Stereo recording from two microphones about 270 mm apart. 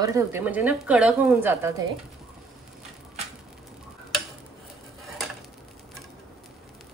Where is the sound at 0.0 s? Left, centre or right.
Centre.